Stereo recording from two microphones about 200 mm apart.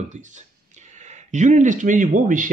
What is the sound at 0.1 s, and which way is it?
Speech, 35° right (ahead or behind).